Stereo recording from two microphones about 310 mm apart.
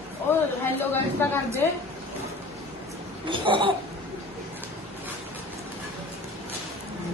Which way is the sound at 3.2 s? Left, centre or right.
Centre.